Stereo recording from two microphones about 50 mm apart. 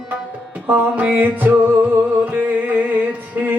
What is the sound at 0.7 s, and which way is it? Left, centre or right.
Music, right.